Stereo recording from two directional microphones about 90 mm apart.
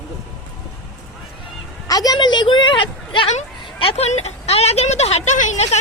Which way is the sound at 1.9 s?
45° left (ahead or behind).